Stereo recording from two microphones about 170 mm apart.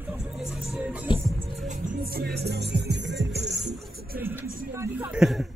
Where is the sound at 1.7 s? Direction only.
55° right (ahead or behind); by 3.3 s 90° right.